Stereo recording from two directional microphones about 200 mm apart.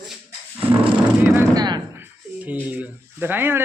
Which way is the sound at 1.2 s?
15° right (ahead or behind).